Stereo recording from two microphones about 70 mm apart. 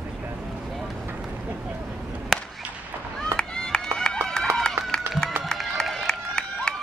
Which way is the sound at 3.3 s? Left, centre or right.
Centre.